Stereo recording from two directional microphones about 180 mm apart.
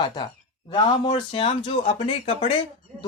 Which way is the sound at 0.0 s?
25° left (ahead or behind).